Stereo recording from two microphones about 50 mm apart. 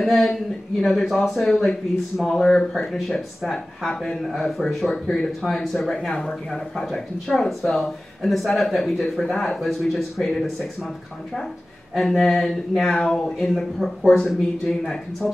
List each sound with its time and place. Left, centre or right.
0.0 s speech: centre
3.9 s speech: centre
4.2 s speech: centre
4.9 s speech: centre
5.4 s speech: centre
5.9 s speech: centre
11.9 s speech: centre